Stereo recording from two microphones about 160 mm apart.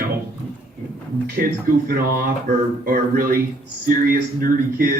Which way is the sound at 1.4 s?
65° right (ahead or behind).